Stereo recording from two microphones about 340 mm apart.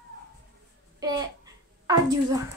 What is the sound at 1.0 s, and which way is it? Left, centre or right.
A child's voice, centre.